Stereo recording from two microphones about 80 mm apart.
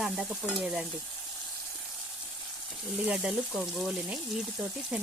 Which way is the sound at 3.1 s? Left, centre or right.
Centre.